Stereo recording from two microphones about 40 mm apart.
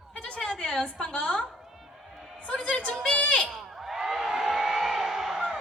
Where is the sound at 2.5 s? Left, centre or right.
Left.